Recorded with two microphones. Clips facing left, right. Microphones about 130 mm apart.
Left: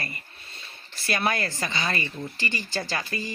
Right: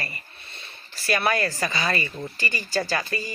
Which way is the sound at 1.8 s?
35° right (ahead or behind).